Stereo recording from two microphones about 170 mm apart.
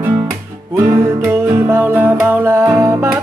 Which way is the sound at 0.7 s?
15° right (ahead or behind).